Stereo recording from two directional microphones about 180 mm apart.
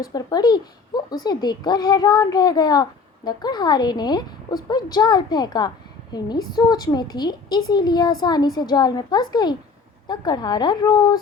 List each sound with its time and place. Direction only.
0.0 s a woman's voice: 20° left (ahead or behind)